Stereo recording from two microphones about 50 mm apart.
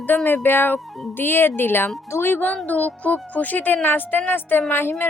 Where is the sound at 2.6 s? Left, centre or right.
Left.